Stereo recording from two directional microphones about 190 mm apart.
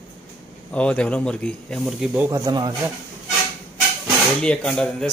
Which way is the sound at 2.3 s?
20° right (ahead or behind).